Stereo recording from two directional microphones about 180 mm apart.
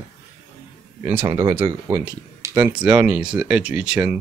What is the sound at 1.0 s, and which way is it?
Speech, 10° right (ahead or behind).